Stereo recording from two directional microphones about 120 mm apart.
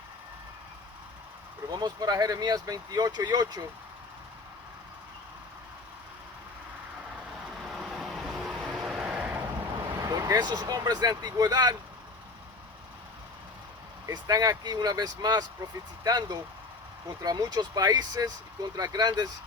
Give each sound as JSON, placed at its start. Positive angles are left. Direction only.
{"t": 1.7, "sound": "speech", "side_deg": -35}
{"t": 7.5, "sound": "vehicle", "side_deg": -5}
{"t": 9.9, "sound": "speech", "side_deg": -30}
{"t": 14.1, "sound": "speech", "side_deg": -30}